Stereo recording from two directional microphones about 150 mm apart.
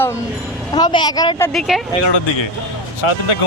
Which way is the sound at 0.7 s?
30° left (ahead or behind).